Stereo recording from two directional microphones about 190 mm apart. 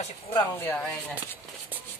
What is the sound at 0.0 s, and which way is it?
Speech, 25° left (ahead or behind).